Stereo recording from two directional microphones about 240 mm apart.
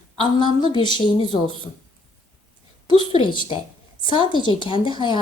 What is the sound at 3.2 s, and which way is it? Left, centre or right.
A woman's voice, centre.